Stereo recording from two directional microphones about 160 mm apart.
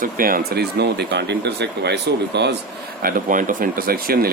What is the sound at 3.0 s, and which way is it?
Speech, 60° right (ahead or behind).